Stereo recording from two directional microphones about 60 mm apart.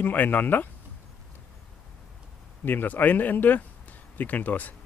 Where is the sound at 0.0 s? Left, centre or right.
Left.